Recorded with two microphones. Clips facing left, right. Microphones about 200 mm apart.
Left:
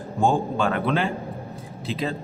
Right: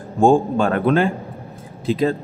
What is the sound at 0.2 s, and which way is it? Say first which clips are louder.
A man's voice: right 7 dB; 50° right (ahead or behind).